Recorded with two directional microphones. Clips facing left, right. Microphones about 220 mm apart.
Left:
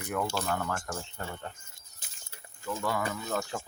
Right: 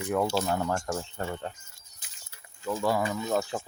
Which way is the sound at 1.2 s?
35° right (ahead or behind).